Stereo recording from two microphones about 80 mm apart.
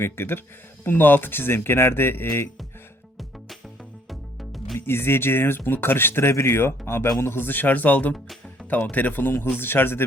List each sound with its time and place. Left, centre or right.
0.0 s speech: left
4.1 s music: centre
4.9 s speech: left